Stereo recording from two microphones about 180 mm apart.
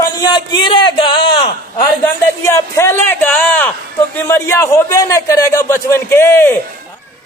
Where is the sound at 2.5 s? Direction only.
15° left (ahead or behind).